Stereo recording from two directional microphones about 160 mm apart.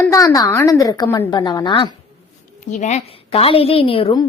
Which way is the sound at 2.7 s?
50° left (ahead or behind).